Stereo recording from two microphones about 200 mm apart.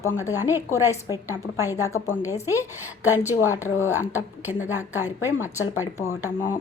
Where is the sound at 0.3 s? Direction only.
10° right (ahead or behind).